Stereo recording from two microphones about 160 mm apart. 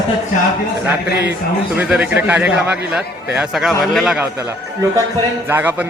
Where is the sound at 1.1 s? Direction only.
90° left.